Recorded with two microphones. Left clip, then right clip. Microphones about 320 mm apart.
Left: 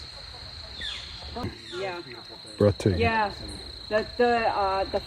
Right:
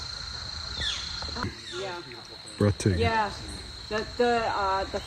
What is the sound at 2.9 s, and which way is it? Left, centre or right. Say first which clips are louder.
Speech: left 1 dB; left.